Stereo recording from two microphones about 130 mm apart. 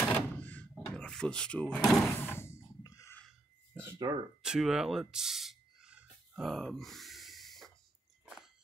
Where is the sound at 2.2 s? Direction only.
20° left (ahead or behind).